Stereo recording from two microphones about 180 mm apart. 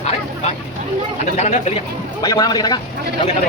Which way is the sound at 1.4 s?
40° left (ahead or behind).